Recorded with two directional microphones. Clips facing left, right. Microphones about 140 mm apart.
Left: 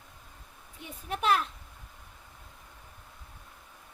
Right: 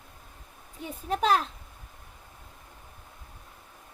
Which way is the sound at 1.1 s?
35° right (ahead or behind).